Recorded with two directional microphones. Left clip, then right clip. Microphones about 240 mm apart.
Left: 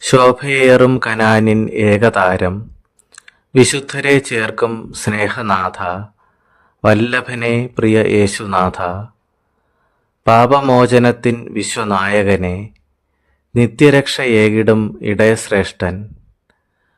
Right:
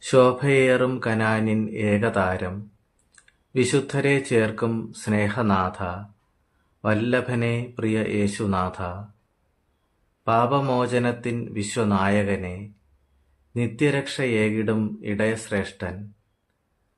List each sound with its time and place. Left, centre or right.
0.0 s speech: left
10.2 s speech: left